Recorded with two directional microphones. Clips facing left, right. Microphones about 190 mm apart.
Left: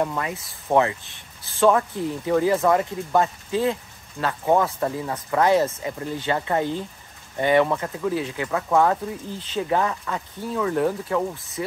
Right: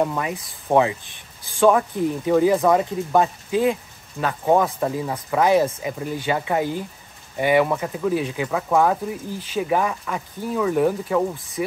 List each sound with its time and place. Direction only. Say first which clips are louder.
0.0 s speech: right 2 dB; 15° right (ahead or behind)
8.5 s speech: even; 10° right (ahead or behind)